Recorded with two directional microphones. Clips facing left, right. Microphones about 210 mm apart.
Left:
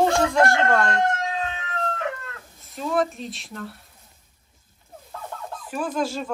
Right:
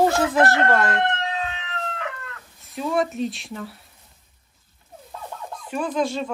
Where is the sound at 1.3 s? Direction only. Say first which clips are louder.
Even; 45° left (ahead or behind).